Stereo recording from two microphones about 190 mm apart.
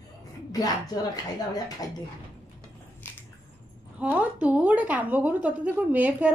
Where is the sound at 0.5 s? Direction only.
20° left (ahead or behind).